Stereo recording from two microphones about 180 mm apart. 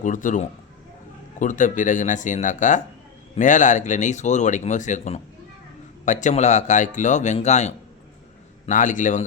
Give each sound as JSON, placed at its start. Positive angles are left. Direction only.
{"t": 0.0, "sound": "a man's voice", "side_deg": 45}